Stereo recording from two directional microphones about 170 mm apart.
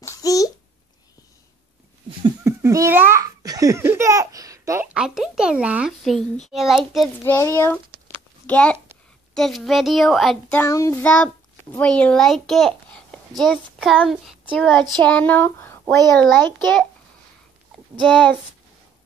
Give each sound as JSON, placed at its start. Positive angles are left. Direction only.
{"t": 0.0, "sound": "babbling", "side_deg": 20}
{"t": 2.0, "sound": "giggle", "side_deg": -20}
{"t": 4.8, "sound": "a child's voice", "side_deg": -5}
{"t": 7.2, "sound": "a child's voice", "side_deg": 15}
{"t": 10.6, "sound": "a child's voice", "side_deg": 15}
{"t": 18.0, "sound": "speech", "side_deg": 5}